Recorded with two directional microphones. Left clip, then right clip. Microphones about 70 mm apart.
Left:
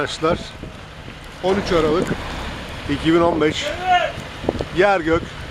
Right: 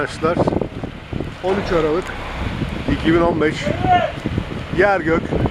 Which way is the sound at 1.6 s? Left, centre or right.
Left.